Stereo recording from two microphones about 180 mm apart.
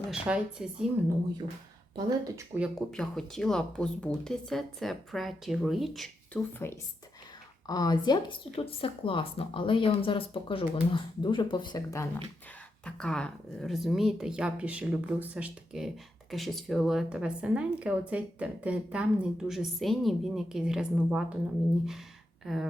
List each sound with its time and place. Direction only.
0.1 s a woman's voice: 5° right (ahead or behind)
2.0 s speech: 20° right (ahead or behind)
2.6 s a woman's voice: centre (ahead or behind)
6.5 s speech: 15° left (ahead or behind)
12.8 s a woman's voice: 5° left (ahead or behind)